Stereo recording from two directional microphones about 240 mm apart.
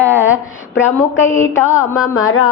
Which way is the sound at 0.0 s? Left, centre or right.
Centre.